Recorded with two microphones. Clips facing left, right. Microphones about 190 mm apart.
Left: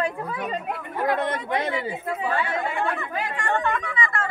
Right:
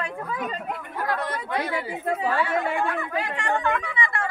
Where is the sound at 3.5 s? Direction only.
5° right (ahead or behind).